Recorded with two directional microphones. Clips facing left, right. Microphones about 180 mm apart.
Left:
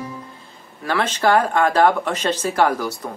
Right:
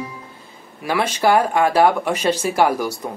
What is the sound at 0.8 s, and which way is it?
Speech, 10° right (ahead or behind).